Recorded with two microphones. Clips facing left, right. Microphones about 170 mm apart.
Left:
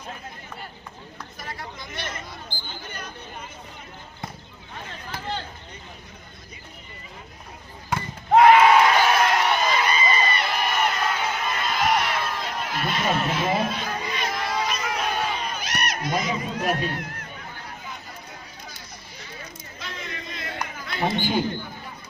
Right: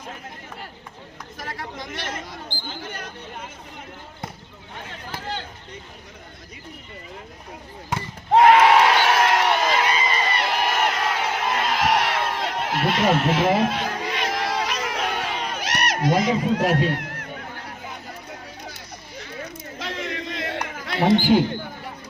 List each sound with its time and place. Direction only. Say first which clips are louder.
1.4 s chatter: right 5 dB; 90° right
8.5 s crowd: even; 90° right
19.2 s a sound: right 7 dB; 75° right (ahead or behind)